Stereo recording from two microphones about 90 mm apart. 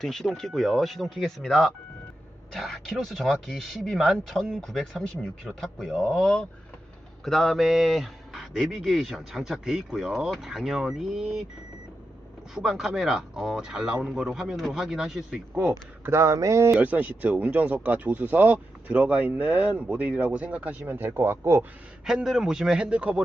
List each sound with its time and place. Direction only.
0.0 s speech: 5° left (ahead or behind)
12.5 s speech: 5° right (ahead or behind)
15.7 s speech: 30° right (ahead or behind)
16.8 s speech: 15° right (ahead or behind)
22.0 s speech: 5° right (ahead or behind)